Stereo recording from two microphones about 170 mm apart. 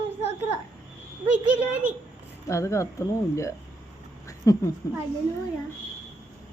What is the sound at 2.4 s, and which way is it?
A woman's voice, 15° left (ahead or behind).